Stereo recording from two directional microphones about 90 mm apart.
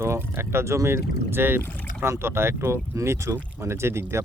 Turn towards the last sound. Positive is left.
turn(degrees=-30)  # may be behind; listen again after turning